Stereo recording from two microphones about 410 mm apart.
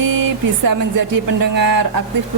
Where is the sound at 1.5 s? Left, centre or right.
Right.